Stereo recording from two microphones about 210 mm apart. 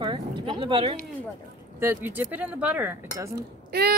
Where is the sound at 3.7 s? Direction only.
50° right (ahead or behind).